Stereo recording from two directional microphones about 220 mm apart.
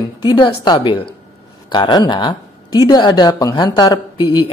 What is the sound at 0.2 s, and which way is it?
Speech, 20° left (ahead or behind).